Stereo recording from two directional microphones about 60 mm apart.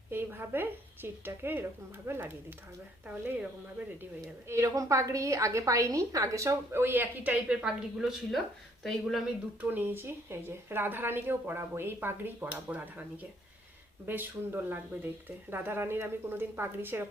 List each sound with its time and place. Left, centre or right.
0.1 s a woman's voice: right
4.4 s a woman's voice: right
6.8 s speech: right
7.4 s a woman's voice: centre
9.6 s speech: right
14.1 s speech: right